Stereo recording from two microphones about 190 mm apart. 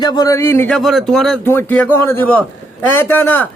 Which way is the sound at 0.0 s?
20° left (ahead or behind).